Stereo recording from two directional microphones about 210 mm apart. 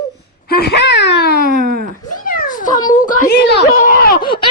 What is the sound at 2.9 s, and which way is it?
Speech, 40° left (ahead or behind).